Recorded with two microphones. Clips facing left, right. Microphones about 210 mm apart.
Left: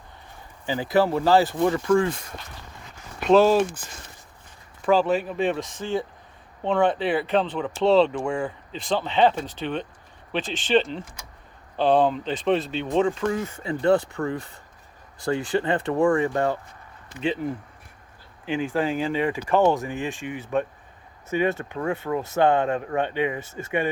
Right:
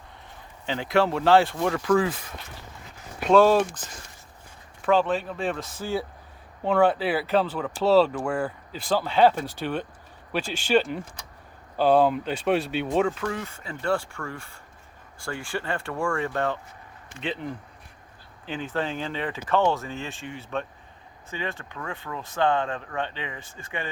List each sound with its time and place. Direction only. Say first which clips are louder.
0.7 s speech: left 2 dB; 5° left (ahead or behind)
3.3 s speech: left 1 dB; centre (ahead or behind)
4.9 s speech: left 2 dB; 5° left (ahead or behind)
13.8 s speech: left 6 dB; 20° left (ahead or behind)
18.4 s speech: left 5 dB; 10° left (ahead or behind)